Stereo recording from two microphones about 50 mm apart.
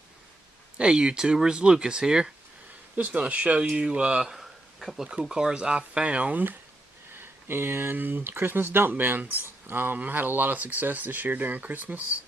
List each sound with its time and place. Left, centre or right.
0.7 s speech: centre
3.0 s speech: right
4.3 s a sound: centre
5.2 s speech: centre
7.2 s speech: right